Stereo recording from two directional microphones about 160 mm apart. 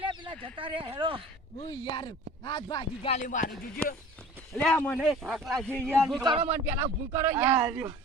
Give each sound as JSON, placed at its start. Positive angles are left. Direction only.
{"t": 0.0, "sound": "speech", "side_deg": -30}
{"t": 1.6, "sound": "speech", "side_deg": 30}
{"t": 3.1, "sound": "speech", "side_deg": 50}
{"t": 3.8, "sound": "speech", "side_deg": 5}
{"t": 6.2, "sound": "speech", "side_deg": -30}
{"t": 6.5, "sound": "speech", "side_deg": -15}